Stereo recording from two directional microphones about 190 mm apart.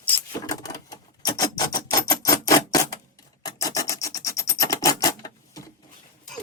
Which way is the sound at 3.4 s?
20° left (ahead or behind).